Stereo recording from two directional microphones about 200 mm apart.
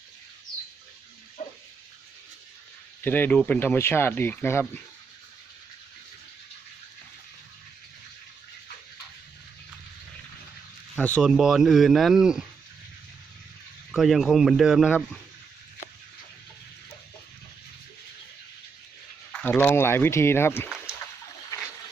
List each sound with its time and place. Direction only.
1.4 s a sound: 35° left (ahead or behind)
3.0 s speech: 10° left (ahead or behind)
10.9 s speech: 5° left (ahead or behind)
11.2 s speech: 5° right (ahead or behind)
13.9 s speech: centre (ahead or behind)
19.3 s speech: 10° left (ahead or behind)